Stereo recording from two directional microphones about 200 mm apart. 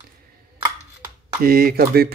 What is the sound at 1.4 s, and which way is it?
Speech, 50° right (ahead or behind).